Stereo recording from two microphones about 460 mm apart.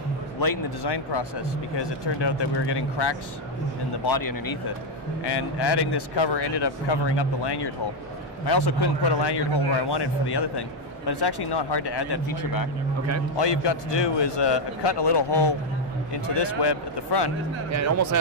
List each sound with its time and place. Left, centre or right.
0.4 s speech: left
4.0 s speech: left
5.2 s speech: left
13.4 s speech: left
17.6 s speech: right